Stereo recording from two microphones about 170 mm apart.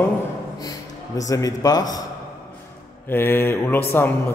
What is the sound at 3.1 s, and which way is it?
A man's voice, 10° left (ahead or behind).